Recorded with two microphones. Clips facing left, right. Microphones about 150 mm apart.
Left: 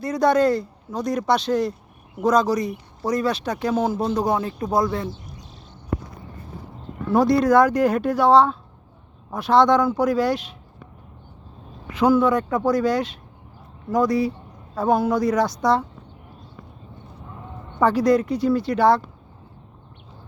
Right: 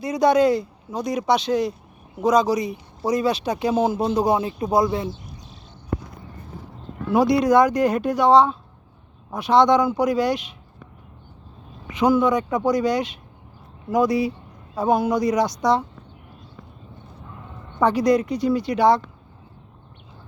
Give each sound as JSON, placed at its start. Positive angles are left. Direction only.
{"t": 0.2, "sound": "speech", "side_deg": 0}
{"t": 0.6, "sound": "speech", "side_deg": -15}
{"t": 1.4, "sound": "speech", "side_deg": 5}
{"t": 3.1, "sound": "speech", "side_deg": -20}
{"t": 4.1, "sound": "speech", "side_deg": -10}
{"t": 7.2, "sound": "speech", "side_deg": 0}
{"t": 11.9, "sound": "speech", "side_deg": 5}
{"t": 17.8, "sound": "speech", "side_deg": 5}